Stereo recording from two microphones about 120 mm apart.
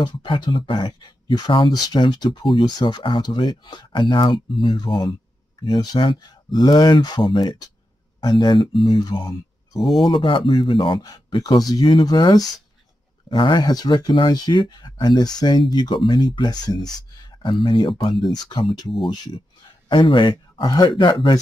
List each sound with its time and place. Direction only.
0.0 s speech: 40° left (ahead or behind)
9.8 s speech: centre (ahead or behind)
10.0 s speech: 45° left (ahead or behind)
17.4 s speech: 45° left (ahead or behind)